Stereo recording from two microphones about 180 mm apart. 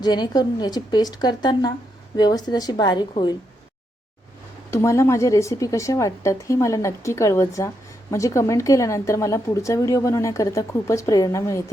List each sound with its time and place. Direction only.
0.0 s a woman's voice: 25° left (ahead or behind)
4.7 s a woman's voice: 15° left (ahead or behind)